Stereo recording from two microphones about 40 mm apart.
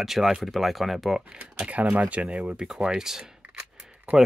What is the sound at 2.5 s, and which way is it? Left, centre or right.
Speech, centre.